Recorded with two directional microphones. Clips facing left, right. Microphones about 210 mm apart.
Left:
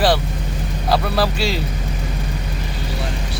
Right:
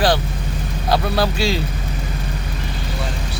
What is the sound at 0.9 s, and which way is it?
Speech, centre (ahead or behind).